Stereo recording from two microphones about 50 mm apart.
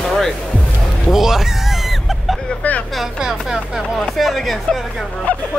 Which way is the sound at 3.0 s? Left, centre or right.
Centre.